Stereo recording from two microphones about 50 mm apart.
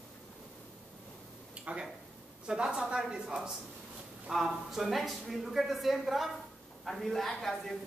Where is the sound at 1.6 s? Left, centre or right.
Right.